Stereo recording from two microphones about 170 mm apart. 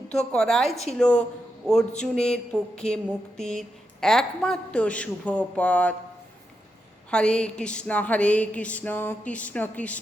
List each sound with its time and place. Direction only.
0.1 s a woman's voice: 5° left (ahead or behind)
7.1 s a woman's voice: 5° left (ahead or behind)
7.6 s a sound: 5° left (ahead or behind)